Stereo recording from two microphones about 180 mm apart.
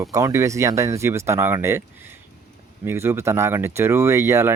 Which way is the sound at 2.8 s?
15° right (ahead or behind).